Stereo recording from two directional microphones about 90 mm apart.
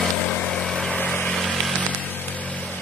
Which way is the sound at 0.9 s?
15° left (ahead or behind).